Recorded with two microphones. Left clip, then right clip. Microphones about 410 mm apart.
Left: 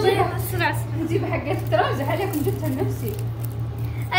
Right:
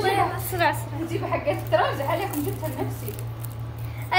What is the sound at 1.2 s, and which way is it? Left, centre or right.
Speech, centre.